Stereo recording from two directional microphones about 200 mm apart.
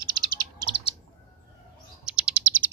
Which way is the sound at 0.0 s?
20° right (ahead or behind).